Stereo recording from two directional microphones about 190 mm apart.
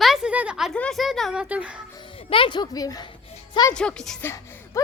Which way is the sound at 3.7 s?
5° left (ahead or behind).